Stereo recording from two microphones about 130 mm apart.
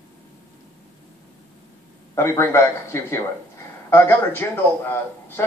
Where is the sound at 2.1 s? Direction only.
20° left (ahead or behind).